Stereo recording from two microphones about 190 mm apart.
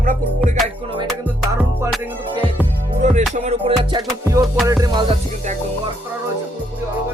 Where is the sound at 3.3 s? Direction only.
35° right (ahead or behind).